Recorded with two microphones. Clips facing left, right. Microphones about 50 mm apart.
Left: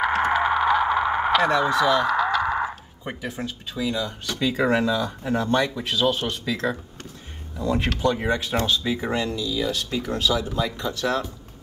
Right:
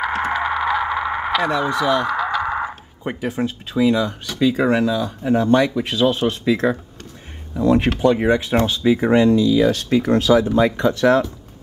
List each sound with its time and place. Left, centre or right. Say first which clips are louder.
0.3 s a sound: even; centre
3.0 s speech: right 8 dB; centre
3.3 s speech: right 9 dB; right
4.3 s speech: right 4 dB; centre
5.8 s speech: right 5 dB; right
9.0 s speech: right 11 dB; right